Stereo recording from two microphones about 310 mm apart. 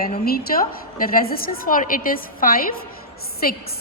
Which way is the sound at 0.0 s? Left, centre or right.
Left.